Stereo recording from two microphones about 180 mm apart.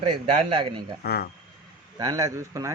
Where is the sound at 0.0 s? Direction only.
35° right (ahead or behind).